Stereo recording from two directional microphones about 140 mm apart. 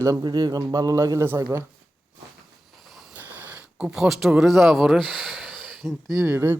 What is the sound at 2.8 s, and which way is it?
Vehicle, centre (ahead or behind).